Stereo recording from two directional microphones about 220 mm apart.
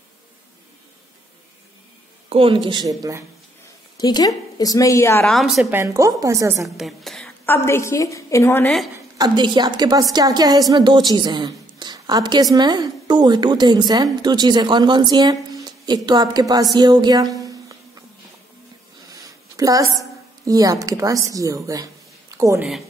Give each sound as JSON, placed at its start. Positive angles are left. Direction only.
{"t": 2.2, "sound": "a woman's voice", "side_deg": -25}
{"t": 4.0, "sound": "a woman's voice", "side_deg": 20}
{"t": 6.8, "sound": "a woman's voice", "side_deg": 0}
{"t": 9.2, "sound": "a woman's voice", "side_deg": -20}
{"t": 16.7, "sound": "a sound", "side_deg": -20}
{"t": 19.0, "sound": "a woman's voice", "side_deg": -15}